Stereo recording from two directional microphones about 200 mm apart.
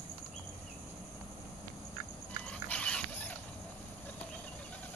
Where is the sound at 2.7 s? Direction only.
5° left (ahead or behind).